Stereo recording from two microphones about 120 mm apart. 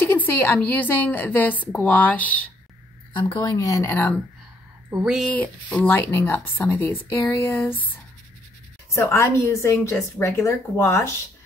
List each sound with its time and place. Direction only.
0.0 s a woman's voice: 15° left (ahead or behind)
3.1 s a woman's voice: 40° left (ahead or behind); by 4.1 s 20° left (ahead or behind)
5.2 s a woman's voice: 15° left (ahead or behind)
8.9 s a woman's voice: 25° left (ahead or behind)